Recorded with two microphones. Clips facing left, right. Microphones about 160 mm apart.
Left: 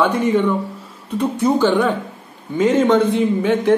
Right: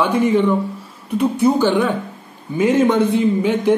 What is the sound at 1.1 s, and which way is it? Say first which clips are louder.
A man's voice: right 2 dB; 10° right (ahead or behind).